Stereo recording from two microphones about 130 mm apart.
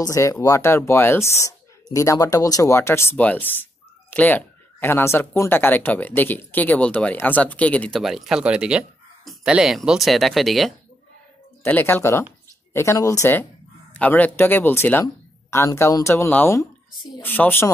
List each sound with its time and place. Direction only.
0.0 s speech: 25° left (ahead or behind); by 8.0 s 10° left (ahead or behind)
8.0 s speech: centre (ahead or behind)
11.6 s speech: 15° left (ahead or behind)